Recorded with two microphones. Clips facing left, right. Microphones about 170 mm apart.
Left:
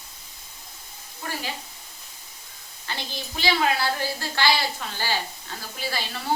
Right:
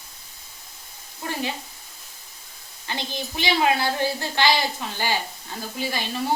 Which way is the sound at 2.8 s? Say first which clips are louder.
Right 4 dB; 20° right (ahead or behind).